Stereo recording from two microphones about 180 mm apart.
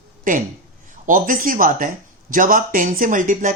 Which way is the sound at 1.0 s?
50° right (ahead or behind).